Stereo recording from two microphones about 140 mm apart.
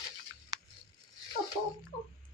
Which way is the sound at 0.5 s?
30° right (ahead or behind).